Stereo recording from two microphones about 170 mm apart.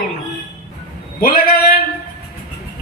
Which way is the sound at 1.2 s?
60° left (ahead or behind).